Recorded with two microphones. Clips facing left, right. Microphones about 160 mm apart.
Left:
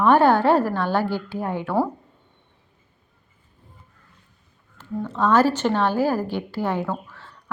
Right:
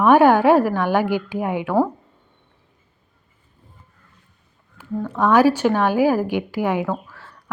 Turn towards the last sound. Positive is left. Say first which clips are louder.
# right 3 dB
turn(degrees=-10)  # may be behind; listen again after turning